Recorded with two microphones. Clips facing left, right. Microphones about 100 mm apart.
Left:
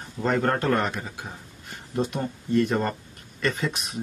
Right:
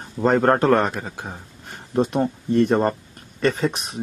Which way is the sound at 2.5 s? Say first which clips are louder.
Right 5 dB; 35° right (ahead or behind).